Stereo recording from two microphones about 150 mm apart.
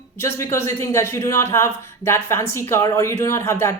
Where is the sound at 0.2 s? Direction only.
20° left (ahead or behind).